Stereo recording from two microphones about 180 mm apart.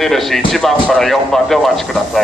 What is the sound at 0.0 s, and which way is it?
Speech, centre (ahead or behind).